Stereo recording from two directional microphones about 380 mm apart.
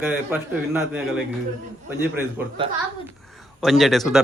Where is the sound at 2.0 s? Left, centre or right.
Centre.